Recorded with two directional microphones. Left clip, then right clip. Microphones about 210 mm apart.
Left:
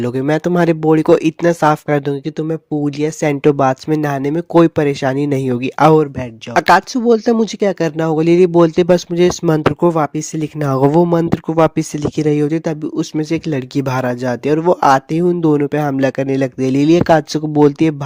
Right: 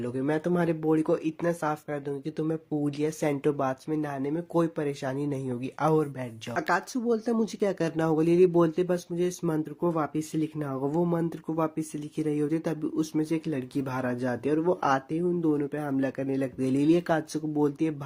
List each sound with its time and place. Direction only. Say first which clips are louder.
0.0 s speech: left 12 dB; 50° left (ahead or behind)